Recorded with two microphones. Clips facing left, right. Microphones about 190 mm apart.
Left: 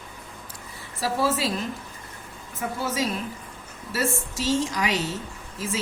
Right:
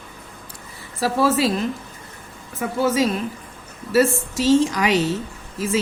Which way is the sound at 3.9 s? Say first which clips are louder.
Right 10 dB; 70° right (ahead or behind).